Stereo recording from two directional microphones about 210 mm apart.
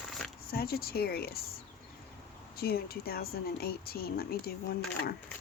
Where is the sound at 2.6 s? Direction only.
45° left (ahead or behind).